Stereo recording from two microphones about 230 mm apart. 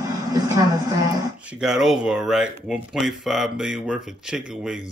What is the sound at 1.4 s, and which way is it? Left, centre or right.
Speech, centre.